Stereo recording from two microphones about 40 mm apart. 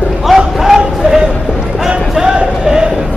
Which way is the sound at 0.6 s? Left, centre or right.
Centre.